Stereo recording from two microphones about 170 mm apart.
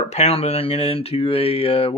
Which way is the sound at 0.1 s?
40° left (ahead or behind).